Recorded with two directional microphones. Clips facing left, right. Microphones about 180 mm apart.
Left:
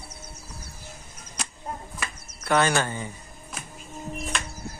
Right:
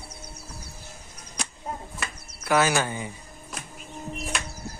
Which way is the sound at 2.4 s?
5° right (ahead or behind).